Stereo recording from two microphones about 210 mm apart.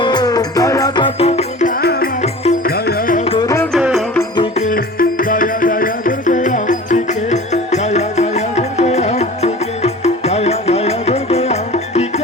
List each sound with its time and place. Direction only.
0.0 s music: 20° left (ahead or behind)
1.8 s music: 50° left (ahead or behind)
2.2 s music: 30° left (ahead or behind)
2.6 s music: 45° left (ahead or behind)
3.2 s music: 20° left (ahead or behind)
3.7 s music: 5° right (ahead or behind)
4.5 s music: 40° left (ahead or behind)